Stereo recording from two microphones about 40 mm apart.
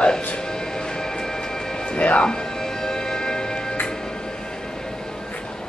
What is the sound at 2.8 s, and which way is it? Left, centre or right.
Music, centre.